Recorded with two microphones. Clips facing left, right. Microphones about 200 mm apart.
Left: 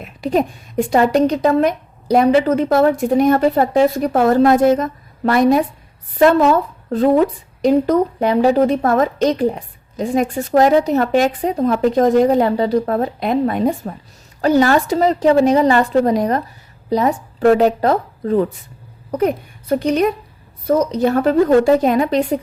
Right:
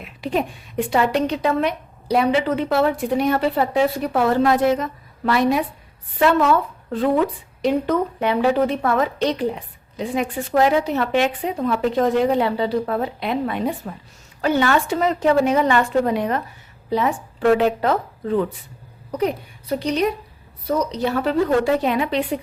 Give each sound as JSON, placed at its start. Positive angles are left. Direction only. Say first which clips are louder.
{"t": 0.0, "sound": "a woman's voice", "louder": "left 5 dB", "side_deg": 40}
{"t": 19.1, "sound": "a woman's voice", "louder": "left 5 dB", "side_deg": 50}